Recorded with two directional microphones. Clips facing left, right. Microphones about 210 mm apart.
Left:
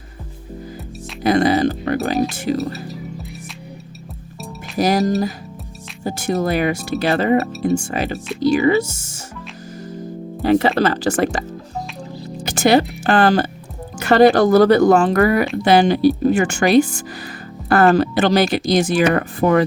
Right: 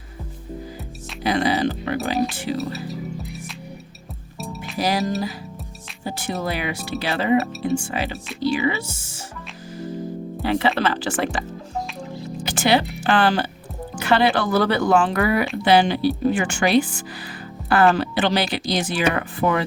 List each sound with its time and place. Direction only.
1.2 s speech: 45° left (ahead or behind)
4.8 s speech: 45° left (ahead or behind)
10.4 s speech: 45° left (ahead or behind)
12.5 s speech: 45° left (ahead or behind)